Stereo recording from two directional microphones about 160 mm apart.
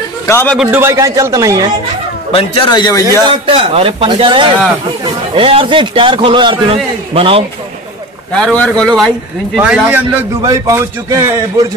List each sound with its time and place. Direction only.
0.3 s a man's voice: 15° left (ahead or behind)
0.6 s speech: 10° right (ahead or behind)
2.3 s a man's voice: 30° left (ahead or behind)
3.1 s a man's voice: 30° right (ahead or behind)
8.5 s a man's voice: 5° left (ahead or behind)
10.4 s speech: 20° right (ahead or behind)